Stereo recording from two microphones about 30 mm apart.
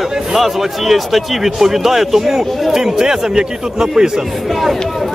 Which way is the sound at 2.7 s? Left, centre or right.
Centre.